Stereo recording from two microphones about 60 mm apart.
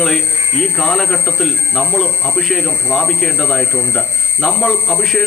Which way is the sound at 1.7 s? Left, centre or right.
Left.